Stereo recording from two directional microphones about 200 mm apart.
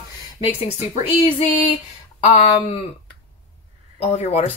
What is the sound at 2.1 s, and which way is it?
Speech, 30° left (ahead or behind).